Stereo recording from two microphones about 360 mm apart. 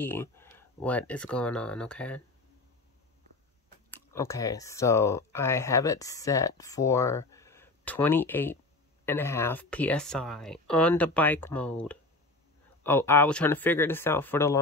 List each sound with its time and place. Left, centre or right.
0.0 s speech: centre
3.9 s speech: centre